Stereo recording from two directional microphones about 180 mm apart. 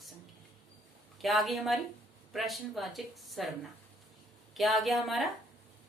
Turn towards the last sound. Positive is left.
turn(degrees=0)  # may be behind; listen again after turning